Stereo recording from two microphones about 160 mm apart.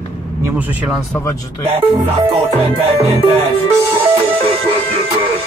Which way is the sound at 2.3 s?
35° right (ahead or behind).